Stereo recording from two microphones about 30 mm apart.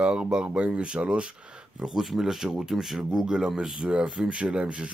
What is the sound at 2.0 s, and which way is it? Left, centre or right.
Speech, centre.